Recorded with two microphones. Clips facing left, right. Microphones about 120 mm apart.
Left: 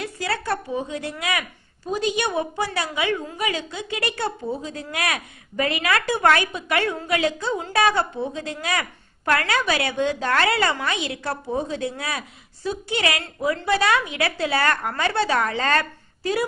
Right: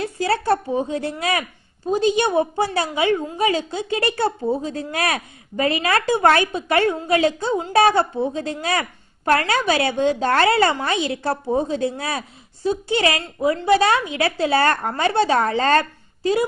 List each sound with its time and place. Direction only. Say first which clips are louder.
0.0 s a woman's voice: right 6 dB; 30° right (ahead or behind)